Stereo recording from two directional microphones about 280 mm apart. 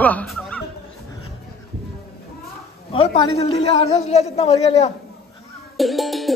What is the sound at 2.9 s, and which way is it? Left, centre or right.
A man's voice, centre.